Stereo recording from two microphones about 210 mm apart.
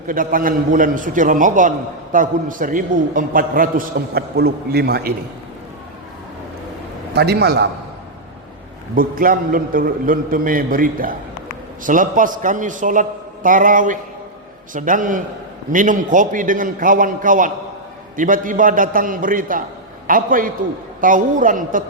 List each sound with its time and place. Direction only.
0.1 s a man's voice: 40° right (ahead or behind)
7.1 s a man's voice: 50° right (ahead or behind)
9.0 s a man's voice: 40° right (ahead or behind)